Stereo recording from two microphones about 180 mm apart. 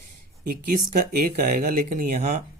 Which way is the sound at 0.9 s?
50° right (ahead or behind).